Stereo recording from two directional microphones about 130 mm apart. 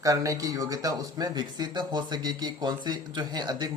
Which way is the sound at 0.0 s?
25° right (ahead or behind).